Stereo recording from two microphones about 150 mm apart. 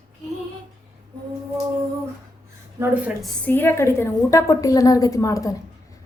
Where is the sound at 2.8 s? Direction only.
10° right (ahead or behind).